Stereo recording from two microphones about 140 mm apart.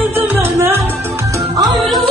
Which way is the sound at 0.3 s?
15° right (ahead or behind).